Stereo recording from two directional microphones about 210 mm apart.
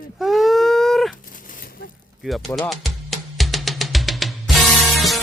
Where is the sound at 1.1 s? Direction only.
40° left (ahead or behind).